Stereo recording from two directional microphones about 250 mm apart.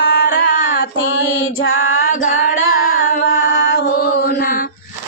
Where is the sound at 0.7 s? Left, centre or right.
Left.